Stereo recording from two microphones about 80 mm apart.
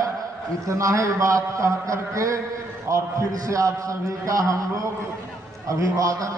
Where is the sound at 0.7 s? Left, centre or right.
Right.